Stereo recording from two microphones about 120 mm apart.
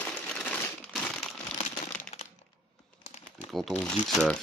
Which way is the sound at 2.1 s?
60° left (ahead or behind).